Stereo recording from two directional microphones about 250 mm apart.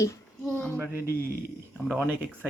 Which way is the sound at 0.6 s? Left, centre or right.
Centre.